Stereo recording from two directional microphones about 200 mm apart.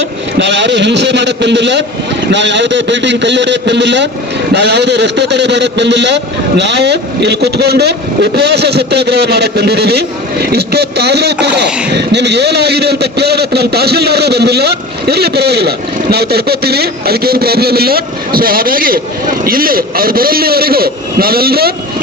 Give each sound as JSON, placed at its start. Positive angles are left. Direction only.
{"t": 0.3, "sound": "a man's voice", "side_deg": -60}